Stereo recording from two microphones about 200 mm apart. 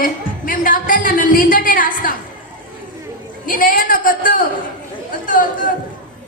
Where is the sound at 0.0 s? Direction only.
45° left (ahead or behind).